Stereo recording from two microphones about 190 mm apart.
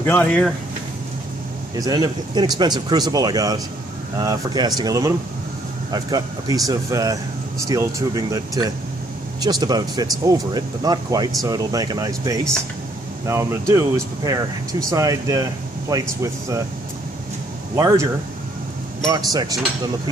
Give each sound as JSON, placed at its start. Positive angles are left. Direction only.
{"t": 0.0, "sound": "speech", "side_deg": 10}
{"t": 1.8, "sound": "speech", "side_deg": -20}
{"t": 17.7, "sound": "speech", "side_deg": -20}
{"t": 19.3, "sound": "speech", "side_deg": -20}